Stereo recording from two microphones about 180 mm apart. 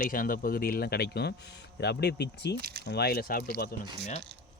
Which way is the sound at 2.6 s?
60° right (ahead or behind).